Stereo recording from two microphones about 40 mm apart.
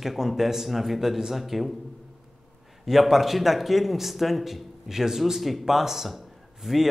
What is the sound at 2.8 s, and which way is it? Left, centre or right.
A man's voice, centre.